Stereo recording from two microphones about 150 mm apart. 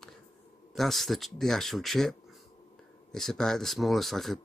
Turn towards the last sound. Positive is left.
turn(degrees=0)  # may be behind; listen again after turning